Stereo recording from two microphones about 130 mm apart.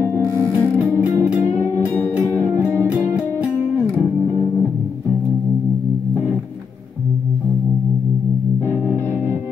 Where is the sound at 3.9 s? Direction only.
15° left (ahead or behind).